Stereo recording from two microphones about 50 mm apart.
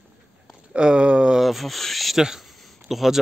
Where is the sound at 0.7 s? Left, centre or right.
Centre.